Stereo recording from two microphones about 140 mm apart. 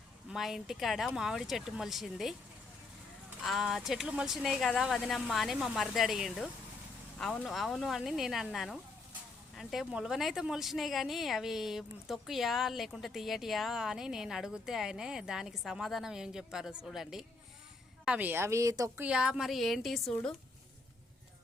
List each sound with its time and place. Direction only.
0.3 s a woman's voice: centre (ahead or behind)
3.4 s a woman's voice: centre (ahead or behind); by 19.0 s 25° right (ahead or behind)
19.0 s a woman's voice: 5° right (ahead or behind)